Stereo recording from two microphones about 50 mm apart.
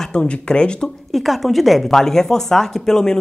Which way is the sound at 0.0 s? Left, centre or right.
Centre.